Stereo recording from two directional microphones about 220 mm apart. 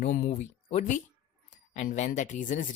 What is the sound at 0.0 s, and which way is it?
Speech, 35° left (ahead or behind).